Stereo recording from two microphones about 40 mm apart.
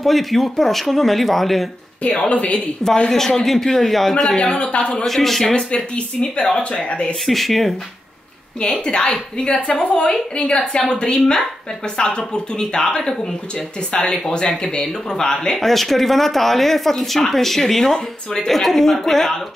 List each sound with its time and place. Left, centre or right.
0.0 s speech: centre
2.0 s a woman's voice: left
3.1 s speech: centre
4.4 s a woman's voice: left
5.0 s speech: centre
6.5 s a woman's voice: left
7.2 s speech: centre
8.5 s a woman's voice: left